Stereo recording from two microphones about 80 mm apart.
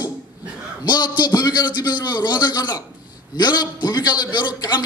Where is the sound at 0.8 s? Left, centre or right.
Left.